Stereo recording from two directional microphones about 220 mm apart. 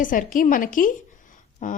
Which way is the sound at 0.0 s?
35° left (ahead or behind).